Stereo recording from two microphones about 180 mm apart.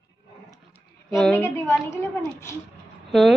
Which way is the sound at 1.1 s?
5° left (ahead or behind).